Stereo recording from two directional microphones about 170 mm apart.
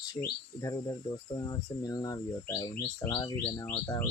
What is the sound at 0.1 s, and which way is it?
Speech, 20° left (ahead or behind).